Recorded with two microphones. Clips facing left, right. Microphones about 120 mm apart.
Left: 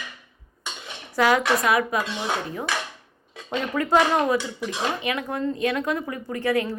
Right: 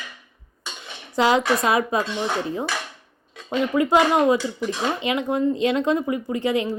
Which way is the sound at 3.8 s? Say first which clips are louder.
Right 2 dB; 15° right (ahead or behind).